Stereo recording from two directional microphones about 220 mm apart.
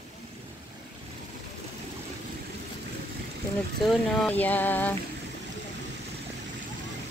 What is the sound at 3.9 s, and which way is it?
Speech, 5° left (ahead or behind).